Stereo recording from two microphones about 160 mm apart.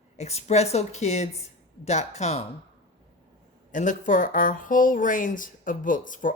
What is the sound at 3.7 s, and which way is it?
Speech, 50° left (ahead or behind).